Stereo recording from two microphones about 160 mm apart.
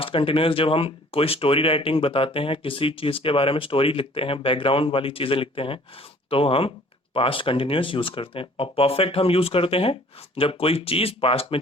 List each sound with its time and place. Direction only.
0.0 s speech: 35° left (ahead or behind)